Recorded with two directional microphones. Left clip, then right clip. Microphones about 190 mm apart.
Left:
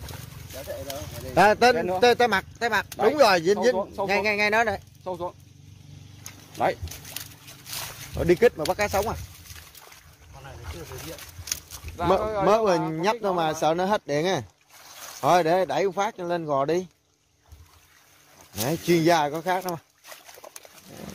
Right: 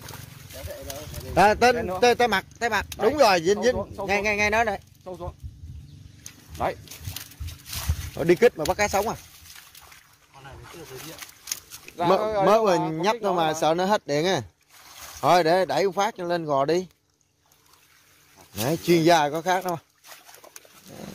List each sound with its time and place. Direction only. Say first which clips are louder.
0.8 s speech: left 2 dB; 5° right (ahead or behind)
3.7 s speech: left 3 dB; 20° left (ahead or behind)
4.0 s speech: even; 5° right (ahead or behind)
5.0 s speech: left 5 dB; 20° left (ahead or behind)
8.1 s speech: right 1 dB; 20° right (ahead or behind)
12.2 s speech: right 3 dB; 50° right (ahead or behind)
12.4 s speech: right 1 dB; 15° right (ahead or behind)
18.6 s speech: right 1 dB; 20° right (ahead or behind)